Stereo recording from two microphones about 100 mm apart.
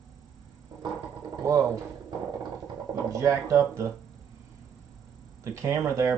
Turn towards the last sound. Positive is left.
turn(degrees=-30)  # may be behind; listen again after turning